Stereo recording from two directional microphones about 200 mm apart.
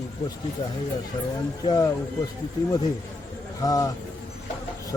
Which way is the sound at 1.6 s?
20° left (ahead or behind).